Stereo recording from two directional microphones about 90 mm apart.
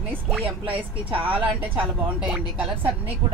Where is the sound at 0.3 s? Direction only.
15° right (ahead or behind).